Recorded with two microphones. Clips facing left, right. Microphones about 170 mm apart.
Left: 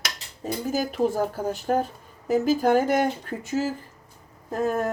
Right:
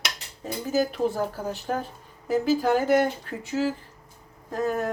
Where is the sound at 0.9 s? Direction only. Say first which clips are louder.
Left 2 dB; 45° left (ahead or behind).